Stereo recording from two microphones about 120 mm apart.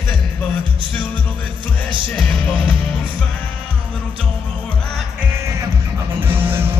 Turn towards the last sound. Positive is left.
turn(degrees=-20)  # may be behind; listen again after turning